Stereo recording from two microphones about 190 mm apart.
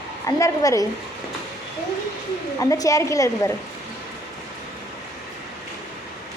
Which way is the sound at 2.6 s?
15° left (ahead or behind).